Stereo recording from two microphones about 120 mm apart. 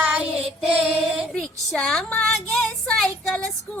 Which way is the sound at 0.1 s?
5° right (ahead or behind).